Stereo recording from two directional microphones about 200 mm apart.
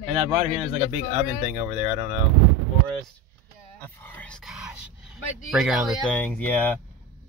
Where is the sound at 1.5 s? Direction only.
30° right (ahead or behind).